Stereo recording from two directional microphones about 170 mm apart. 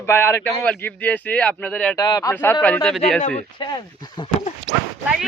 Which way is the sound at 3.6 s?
25° left (ahead or behind).